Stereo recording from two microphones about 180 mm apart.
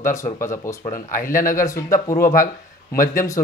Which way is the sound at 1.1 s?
50° left (ahead or behind).